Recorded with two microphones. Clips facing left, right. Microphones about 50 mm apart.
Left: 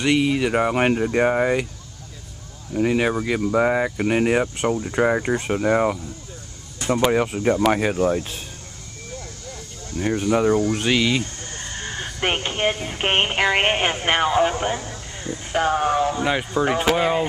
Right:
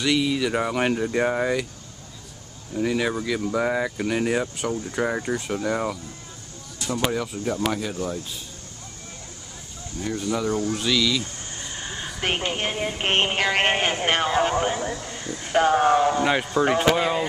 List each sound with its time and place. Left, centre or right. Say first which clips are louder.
0.0 s speech: left 3 dB; left
2.7 s speech: left 4 dB; left
4.1 s speech: left 5 dB; left
9.9 s speech: left 6 dB; left
12.6 s speech: left 3 dB; centre
14.8 s a man's voice: right 5 dB; right
15.0 s a sound: left 2 dB; left
15.4 s speech: right 2 dB; centre
16.6 s speech: left 1 dB; centre